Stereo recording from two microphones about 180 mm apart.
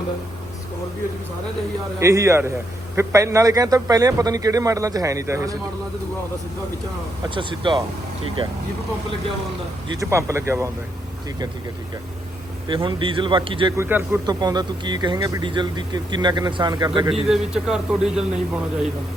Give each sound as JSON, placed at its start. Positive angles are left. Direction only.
{"t": 2.0, "sound": "speech", "side_deg": -15}
{"t": 7.3, "sound": "speech", "side_deg": -25}
{"t": 10.0, "sound": "speech", "side_deg": -15}
{"t": 12.6, "sound": "speech", "side_deg": -25}
{"t": 13.7, "sound": "speech", "side_deg": -15}
{"t": 17.1, "sound": "a man's voice", "side_deg": -5}